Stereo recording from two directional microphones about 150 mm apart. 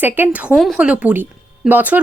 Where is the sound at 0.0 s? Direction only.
15° right (ahead or behind).